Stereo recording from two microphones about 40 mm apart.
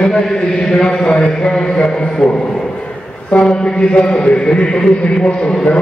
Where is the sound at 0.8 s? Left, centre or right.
Centre.